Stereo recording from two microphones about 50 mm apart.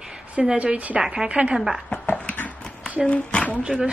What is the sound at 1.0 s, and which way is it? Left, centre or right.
Speech, centre.